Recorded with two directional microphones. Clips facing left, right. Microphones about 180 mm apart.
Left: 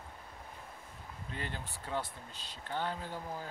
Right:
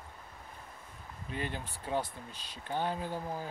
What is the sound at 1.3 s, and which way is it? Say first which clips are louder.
Speech: right 4 dB; 15° right (ahead or behind).